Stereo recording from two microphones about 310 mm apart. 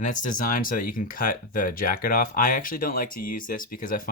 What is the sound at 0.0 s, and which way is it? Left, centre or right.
Speech, left.